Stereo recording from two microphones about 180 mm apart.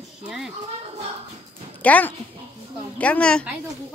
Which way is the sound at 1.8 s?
10° left (ahead or behind).